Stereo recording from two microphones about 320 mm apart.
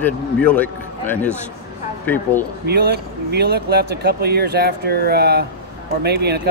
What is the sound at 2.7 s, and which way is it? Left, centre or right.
Speech, right.